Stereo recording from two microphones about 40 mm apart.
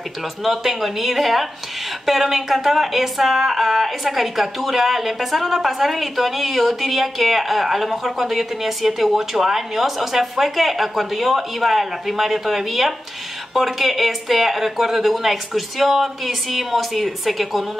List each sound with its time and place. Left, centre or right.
0.4 s speech: centre